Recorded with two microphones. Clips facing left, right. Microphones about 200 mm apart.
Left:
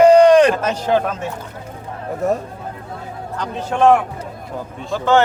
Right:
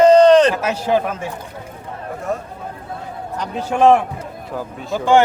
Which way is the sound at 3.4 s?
5° right (ahead or behind).